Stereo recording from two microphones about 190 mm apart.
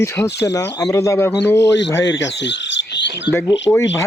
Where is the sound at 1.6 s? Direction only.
70° left (ahead or behind).